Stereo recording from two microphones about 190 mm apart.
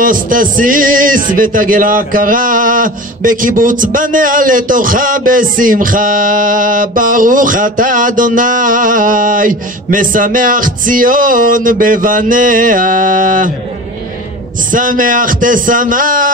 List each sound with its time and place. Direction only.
0.0 s music: 45° right (ahead or behind)
14.7 s music: 45° right (ahead or behind)